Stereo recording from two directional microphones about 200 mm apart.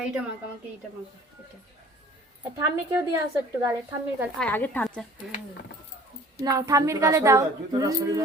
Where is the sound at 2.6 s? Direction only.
10° right (ahead or behind).